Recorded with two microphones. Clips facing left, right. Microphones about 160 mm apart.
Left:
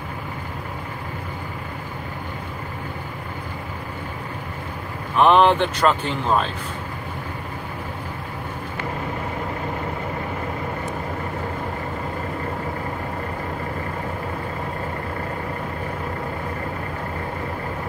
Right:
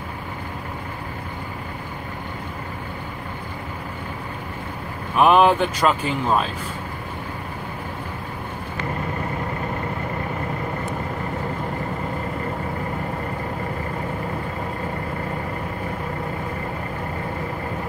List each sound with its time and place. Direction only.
5.1 s speech: 5° right (ahead or behind)